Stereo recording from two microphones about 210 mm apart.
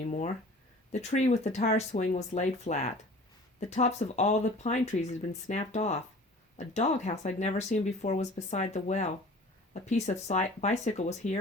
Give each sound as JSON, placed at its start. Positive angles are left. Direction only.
{"t": 0.0, "sound": "speech", "side_deg": 35}